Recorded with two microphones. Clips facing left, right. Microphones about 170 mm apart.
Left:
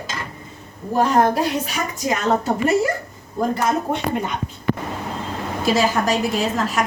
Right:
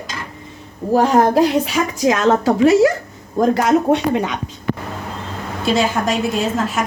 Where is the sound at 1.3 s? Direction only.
90° right.